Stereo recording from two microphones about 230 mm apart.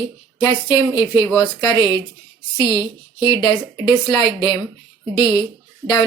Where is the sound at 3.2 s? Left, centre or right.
Centre.